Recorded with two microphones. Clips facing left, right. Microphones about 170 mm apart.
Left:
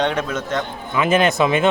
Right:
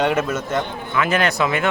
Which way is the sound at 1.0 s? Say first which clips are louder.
Left 3 dB; 20° left (ahead or behind).